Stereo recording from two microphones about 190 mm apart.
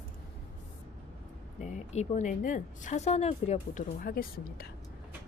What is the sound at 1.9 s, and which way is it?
A woman's voice, 35° left (ahead or behind).